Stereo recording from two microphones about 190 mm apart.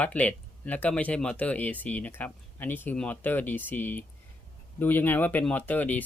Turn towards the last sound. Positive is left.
turn(degrees=10)  # may be behind; listen again after turning